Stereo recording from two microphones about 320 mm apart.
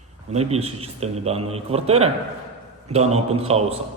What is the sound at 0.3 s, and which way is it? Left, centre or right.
A man's voice, centre.